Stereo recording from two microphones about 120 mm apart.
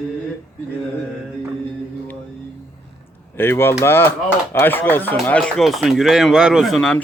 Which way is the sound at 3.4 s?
20° left (ahead or behind).